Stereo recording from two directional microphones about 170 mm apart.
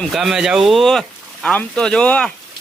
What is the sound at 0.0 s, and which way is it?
Speech, centre (ahead or behind).